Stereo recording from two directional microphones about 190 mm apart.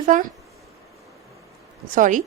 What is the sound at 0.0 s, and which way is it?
Speech, 45° right (ahead or behind).